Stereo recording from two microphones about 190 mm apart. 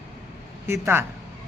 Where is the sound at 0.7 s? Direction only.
10° right (ahead or behind).